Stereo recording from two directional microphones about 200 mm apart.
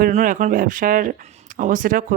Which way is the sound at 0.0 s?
40° right (ahead or behind).